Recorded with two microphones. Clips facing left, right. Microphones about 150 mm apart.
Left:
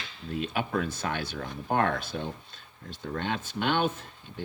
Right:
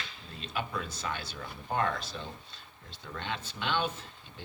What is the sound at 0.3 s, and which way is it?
Speech, 55° left (ahead or behind).